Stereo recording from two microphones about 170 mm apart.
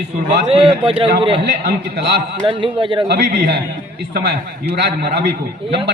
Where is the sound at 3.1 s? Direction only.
80° right.